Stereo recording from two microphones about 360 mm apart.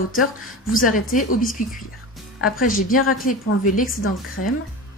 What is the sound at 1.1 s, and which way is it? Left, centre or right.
A woman's voice, left.